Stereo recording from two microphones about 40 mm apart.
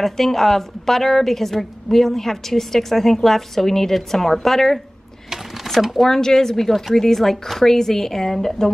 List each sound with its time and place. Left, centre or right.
0.0 s a woman's voice: centre
6.0 s a woman's voice: centre